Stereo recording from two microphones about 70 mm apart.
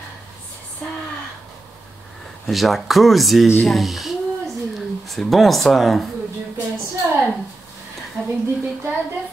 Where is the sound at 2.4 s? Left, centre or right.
Centre.